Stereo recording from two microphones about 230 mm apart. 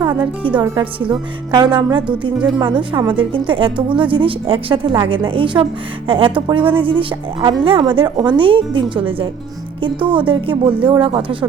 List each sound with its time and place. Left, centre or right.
0.0 s a woman's voice: centre